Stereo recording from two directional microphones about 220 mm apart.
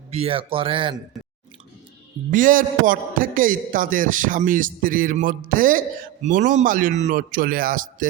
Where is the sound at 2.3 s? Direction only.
40° right (ahead or behind).